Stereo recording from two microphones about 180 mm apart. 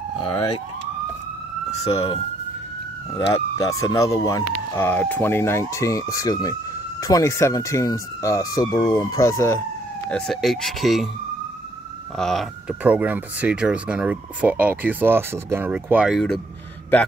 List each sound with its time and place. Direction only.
1.7 s speech: 35° left (ahead or behind)
3.2 s speech: 25° left (ahead or behind)
10.0 s speech: 5° left (ahead or behind)
12.2 s speech: centre (ahead or behind)